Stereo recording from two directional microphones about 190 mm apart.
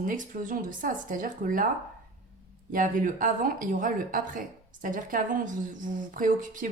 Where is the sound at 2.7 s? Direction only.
45° right (ahead or behind).